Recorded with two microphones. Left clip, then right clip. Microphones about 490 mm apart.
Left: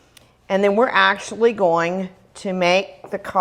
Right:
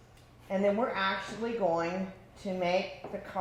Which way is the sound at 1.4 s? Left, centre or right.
Left.